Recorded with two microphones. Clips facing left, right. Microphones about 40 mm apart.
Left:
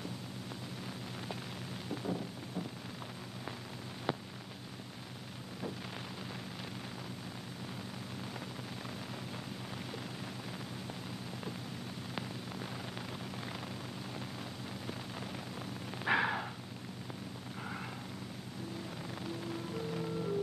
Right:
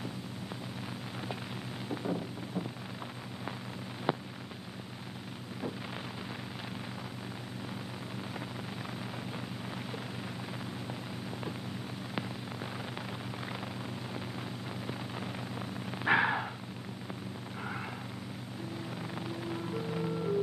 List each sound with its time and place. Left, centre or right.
1.9 s a sound: centre
16.0 s purr: centre
19.1 s music: centre